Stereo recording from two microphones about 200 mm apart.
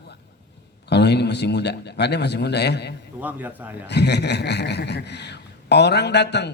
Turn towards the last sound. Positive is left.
turn(degrees=55)  # may be behind; listen again after turning